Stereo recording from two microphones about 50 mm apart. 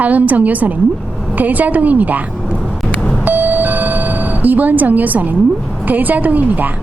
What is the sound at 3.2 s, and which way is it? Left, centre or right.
Doorbell, right.